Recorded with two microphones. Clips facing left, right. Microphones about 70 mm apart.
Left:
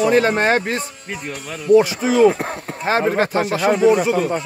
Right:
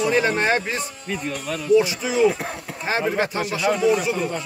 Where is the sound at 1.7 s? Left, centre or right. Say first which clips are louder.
Left 5 dB; left.